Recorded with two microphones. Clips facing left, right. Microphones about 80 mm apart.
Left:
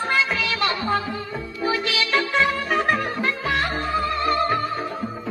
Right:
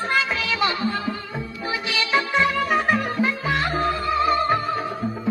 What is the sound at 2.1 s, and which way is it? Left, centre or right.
Music, right.